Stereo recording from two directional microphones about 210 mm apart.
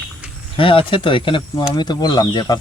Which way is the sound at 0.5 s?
25° left (ahead or behind).